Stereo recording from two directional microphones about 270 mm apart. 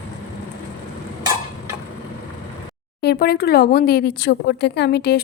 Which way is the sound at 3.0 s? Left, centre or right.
Left.